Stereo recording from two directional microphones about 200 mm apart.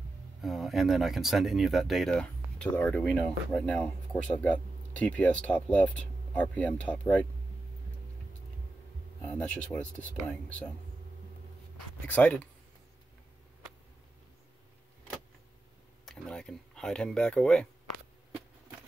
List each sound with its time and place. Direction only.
0.4 s speech: centre (ahead or behind)
9.2 s speech: 5° left (ahead or behind)
12.1 s speech: 5° left (ahead or behind)
16.1 s a sound: 5° left (ahead or behind)